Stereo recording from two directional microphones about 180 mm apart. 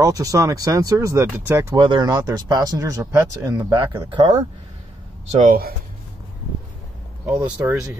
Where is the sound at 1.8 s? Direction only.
25° right (ahead or behind).